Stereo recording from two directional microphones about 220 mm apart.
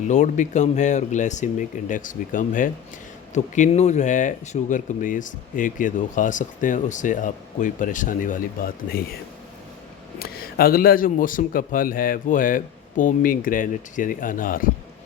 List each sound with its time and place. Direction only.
0.1 s speech: 35° left (ahead or behind)
10.2 s speech: 45° left (ahead or behind)